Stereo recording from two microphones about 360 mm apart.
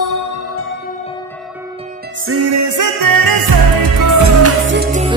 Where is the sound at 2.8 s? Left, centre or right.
Right.